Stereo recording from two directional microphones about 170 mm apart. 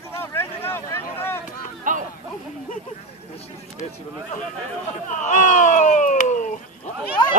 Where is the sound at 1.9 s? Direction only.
50° right (ahead or behind).